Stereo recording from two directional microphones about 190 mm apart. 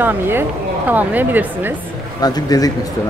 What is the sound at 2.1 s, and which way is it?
Speech, 20° left (ahead or behind).